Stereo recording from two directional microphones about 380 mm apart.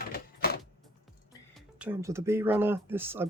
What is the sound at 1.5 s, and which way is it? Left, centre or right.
Speech, centre.